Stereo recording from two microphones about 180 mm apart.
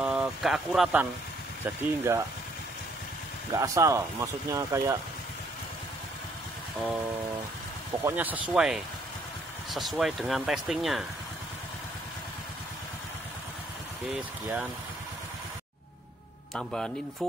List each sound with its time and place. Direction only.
0.0 s speech: 5° right (ahead or behind)
1.6 s speech: 15° right (ahead or behind)
3.5 s speech: 20° right (ahead or behind)
8.0 s speech: 10° right (ahead or behind)
14.1 s speech: 5° right (ahead or behind)
16.5 s speech: 5° left (ahead or behind)